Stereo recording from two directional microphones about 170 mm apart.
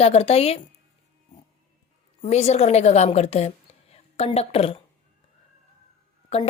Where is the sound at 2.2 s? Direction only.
40° left (ahead or behind).